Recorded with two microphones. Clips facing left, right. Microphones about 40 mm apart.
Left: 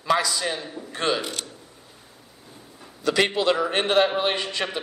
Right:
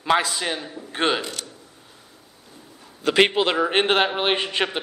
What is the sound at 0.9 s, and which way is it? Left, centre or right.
Mechanisms, right.